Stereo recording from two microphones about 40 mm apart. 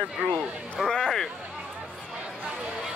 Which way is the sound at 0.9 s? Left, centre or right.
Centre.